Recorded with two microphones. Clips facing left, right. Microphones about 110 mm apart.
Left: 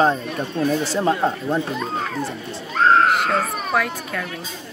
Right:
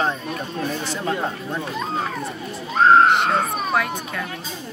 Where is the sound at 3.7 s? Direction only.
5° right (ahead or behind).